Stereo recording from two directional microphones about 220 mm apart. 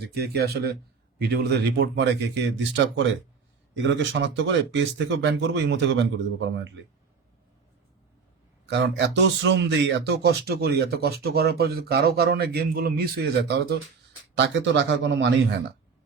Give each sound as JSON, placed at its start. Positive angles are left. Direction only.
{"t": 0.1, "sound": "speech", "side_deg": -45}
{"t": 8.6, "sound": "speech", "side_deg": -50}